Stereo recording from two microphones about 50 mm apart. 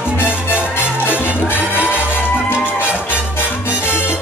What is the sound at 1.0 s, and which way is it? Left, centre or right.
Music, left.